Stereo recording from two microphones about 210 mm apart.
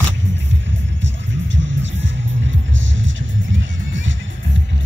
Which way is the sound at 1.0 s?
60° right (ahead or behind).